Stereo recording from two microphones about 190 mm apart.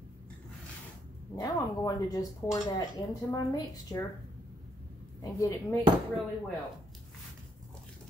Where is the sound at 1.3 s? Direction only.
20° left (ahead or behind).